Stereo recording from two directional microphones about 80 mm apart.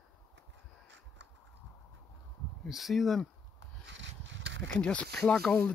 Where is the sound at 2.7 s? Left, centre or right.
Centre.